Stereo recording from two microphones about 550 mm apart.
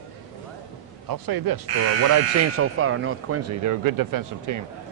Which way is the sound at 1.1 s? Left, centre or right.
Right.